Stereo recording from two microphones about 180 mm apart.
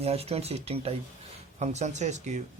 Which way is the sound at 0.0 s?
35° right (ahead or behind).